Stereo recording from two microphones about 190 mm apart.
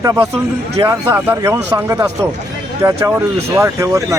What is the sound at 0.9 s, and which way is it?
Speech, 10° right (ahead or behind).